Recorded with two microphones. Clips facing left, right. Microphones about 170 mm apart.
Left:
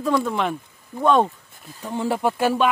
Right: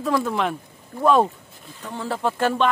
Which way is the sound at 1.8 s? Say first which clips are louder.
Left 4 dB; 15° left (ahead or behind).